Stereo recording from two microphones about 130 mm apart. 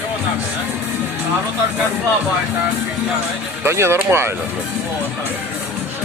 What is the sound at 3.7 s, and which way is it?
Speech, 20° right (ahead or behind).